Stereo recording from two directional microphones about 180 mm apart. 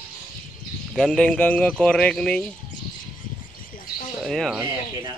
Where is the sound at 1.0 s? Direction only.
5° left (ahead or behind).